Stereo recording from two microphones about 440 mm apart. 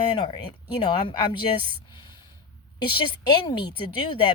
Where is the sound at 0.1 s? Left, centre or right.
Centre.